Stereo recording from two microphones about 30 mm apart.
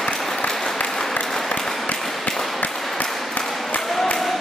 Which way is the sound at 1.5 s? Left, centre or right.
Centre.